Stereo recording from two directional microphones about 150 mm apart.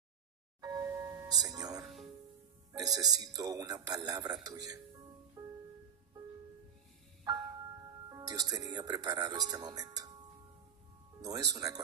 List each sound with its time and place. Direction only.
0.6 s music: 25° right (ahead or behind)
1.8 s music: centre (ahead or behind)
2.8 s speech: 25° right (ahead or behind)
5.4 s music: 20° right (ahead or behind)
7.2 s music: 25° right (ahead or behind)
8.1 s speech: 25° right (ahead or behind)
11.1 s speech: 25° right (ahead or behind)